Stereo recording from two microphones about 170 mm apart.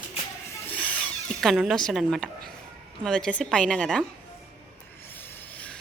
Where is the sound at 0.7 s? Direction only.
10° left (ahead or behind).